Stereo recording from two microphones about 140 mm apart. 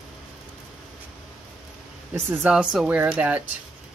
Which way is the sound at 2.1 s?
10° right (ahead or behind).